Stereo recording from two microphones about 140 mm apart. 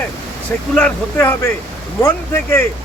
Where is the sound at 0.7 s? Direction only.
10° left (ahead or behind).